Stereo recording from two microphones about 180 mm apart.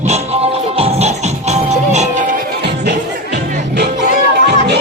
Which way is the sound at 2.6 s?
65° right (ahead or behind).